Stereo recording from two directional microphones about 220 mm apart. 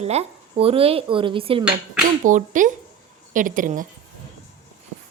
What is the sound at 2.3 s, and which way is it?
Speech, 35° right (ahead or behind).